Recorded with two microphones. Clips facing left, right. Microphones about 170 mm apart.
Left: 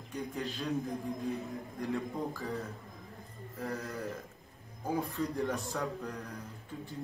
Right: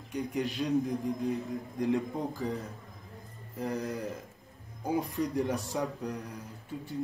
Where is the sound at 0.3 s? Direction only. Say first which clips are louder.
Right 6 dB; 15° right (ahead or behind).